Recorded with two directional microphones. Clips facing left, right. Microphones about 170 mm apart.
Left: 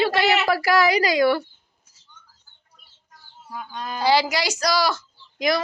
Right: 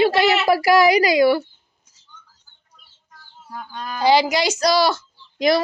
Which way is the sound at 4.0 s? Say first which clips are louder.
Right 4 dB; 20° right (ahead or behind).